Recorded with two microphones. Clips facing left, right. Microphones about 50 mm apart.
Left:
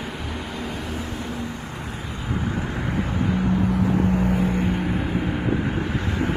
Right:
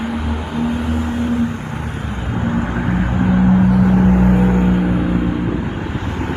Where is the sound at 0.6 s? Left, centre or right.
Right.